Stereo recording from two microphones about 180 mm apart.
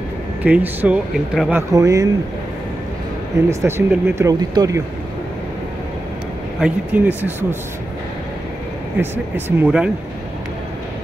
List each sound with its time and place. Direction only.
0.4 s speech: 10° right (ahead or behind)
1.7 s speech: 20° right (ahead or behind)
3.4 s speech: 15° right (ahead or behind)
6.6 s speech: 10° right (ahead or behind)
9.0 s speech: 10° right (ahead or behind)